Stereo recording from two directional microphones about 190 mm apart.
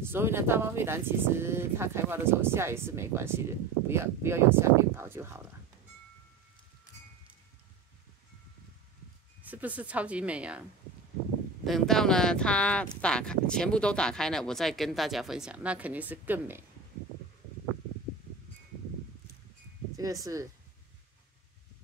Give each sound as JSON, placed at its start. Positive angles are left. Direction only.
{"t": 0.0, "sound": "speech", "side_deg": -10}
{"t": 9.4, "sound": "speech", "side_deg": -10}
{"t": 11.6, "sound": "speech", "side_deg": 0}
{"t": 20.0, "sound": "speech", "side_deg": -20}